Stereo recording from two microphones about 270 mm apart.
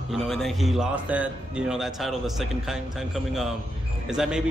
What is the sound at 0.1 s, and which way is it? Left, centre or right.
A man's voice, centre.